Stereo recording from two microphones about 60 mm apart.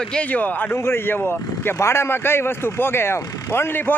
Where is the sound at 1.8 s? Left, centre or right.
Left.